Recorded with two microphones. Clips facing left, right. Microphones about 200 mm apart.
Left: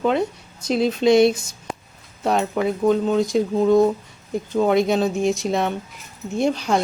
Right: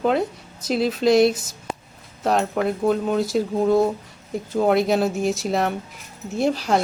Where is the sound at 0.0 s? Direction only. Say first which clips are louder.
Even; centre (ahead or behind).